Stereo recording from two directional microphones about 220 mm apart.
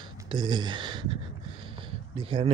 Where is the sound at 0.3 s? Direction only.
20° right (ahead or behind).